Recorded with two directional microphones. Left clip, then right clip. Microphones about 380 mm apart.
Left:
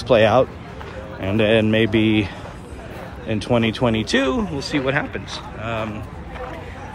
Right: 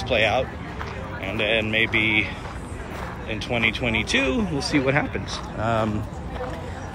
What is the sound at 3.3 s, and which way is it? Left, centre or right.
Speech, centre.